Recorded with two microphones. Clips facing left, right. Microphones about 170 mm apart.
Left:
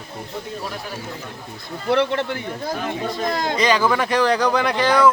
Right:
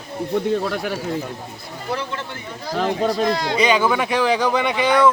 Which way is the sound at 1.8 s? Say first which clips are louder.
Left 8 dB; 65° left (ahead or behind).